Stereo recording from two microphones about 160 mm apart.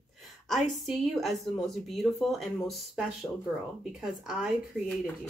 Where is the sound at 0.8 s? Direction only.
Centre (ahead or behind).